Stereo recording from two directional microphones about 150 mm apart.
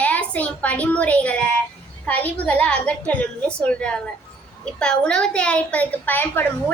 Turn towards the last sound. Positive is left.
turn(degrees=15)  # may be behind; listen again after turning